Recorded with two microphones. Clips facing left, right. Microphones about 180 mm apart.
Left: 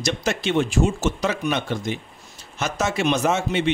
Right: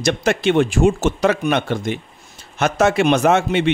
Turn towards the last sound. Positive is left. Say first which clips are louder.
# right 5 dB
turn(degrees=-60)  # may be behind; listen again after turning